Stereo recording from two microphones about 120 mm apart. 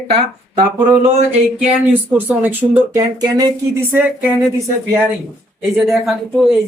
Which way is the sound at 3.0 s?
30° right (ahead or behind).